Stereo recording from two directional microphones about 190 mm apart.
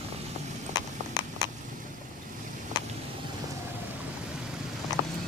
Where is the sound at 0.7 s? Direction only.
20° left (ahead or behind).